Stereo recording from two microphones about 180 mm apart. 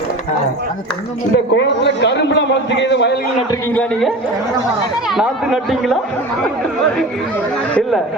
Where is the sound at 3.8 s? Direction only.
Centre (ahead or behind).